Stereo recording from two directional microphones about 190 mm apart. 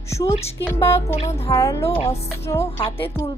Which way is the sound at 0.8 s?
30° left (ahead or behind).